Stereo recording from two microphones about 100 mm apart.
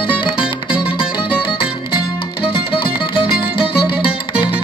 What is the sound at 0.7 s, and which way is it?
Music, 10° right (ahead or behind).